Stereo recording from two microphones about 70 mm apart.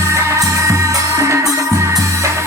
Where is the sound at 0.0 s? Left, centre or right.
Right.